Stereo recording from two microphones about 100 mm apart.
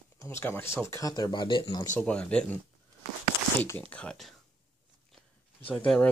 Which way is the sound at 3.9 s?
10° left (ahead or behind).